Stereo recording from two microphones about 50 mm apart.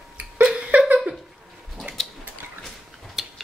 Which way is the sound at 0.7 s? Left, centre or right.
Right.